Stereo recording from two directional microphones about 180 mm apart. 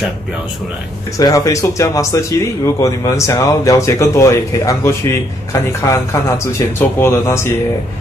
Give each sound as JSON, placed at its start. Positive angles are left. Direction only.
{"t": 1.1, "sound": "speech", "side_deg": 20}